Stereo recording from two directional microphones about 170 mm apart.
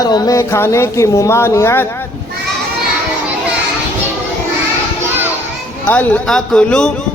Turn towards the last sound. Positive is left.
turn(degrees=5)  # may be behind; listen again after turning